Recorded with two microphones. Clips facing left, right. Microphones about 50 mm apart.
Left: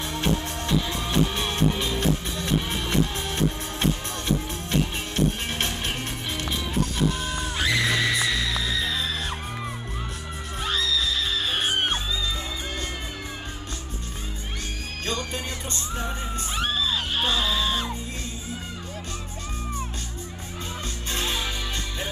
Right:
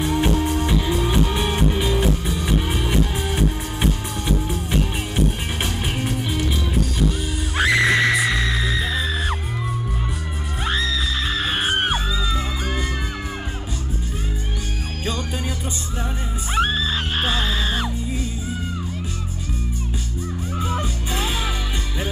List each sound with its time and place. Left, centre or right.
0.0 s music: centre
5.6 s music: centre
7.5 s music: right
10.6 s music: right
16.5 s music: right